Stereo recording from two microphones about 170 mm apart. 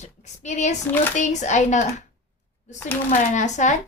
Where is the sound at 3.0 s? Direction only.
45° left (ahead or behind).